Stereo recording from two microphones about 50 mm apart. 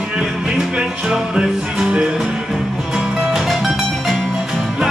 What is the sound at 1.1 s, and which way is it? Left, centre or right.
Music, centre.